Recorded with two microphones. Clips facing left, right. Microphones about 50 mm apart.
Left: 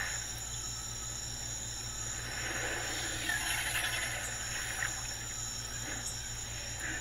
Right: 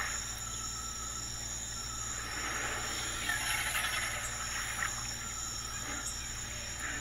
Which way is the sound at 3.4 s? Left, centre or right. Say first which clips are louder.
Right 1 dB; centre.